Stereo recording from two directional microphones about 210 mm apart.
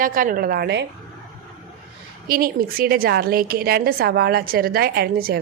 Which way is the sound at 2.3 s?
45° right (ahead or behind).